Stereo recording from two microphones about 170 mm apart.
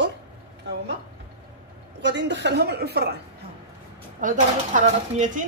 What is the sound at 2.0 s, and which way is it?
A woman's voice, 90° right.